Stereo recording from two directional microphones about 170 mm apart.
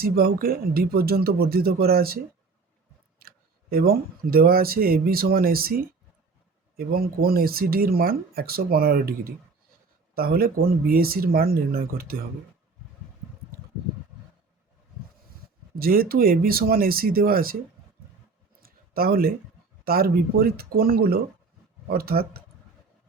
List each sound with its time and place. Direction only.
0.0 s speech: 65° right (ahead or behind)
3.2 s speech: 60° right (ahead or behind)
6.7 s speech: 60° right (ahead or behind)
15.7 s speech: 60° right (ahead or behind)
18.6 s a sound: 60° right (ahead or behind)
19.8 s speech: 60° right (ahead or behind)